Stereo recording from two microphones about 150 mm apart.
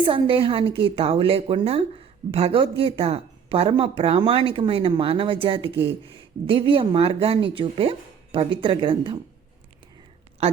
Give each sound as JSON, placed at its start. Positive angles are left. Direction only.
{"t": 0.0, "sound": "speech", "side_deg": -35}
{"t": 10.4, "sound": "a woman's voice", "side_deg": -40}